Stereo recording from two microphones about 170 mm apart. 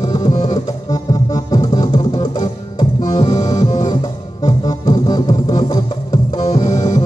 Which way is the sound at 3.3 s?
40° left (ahead or behind).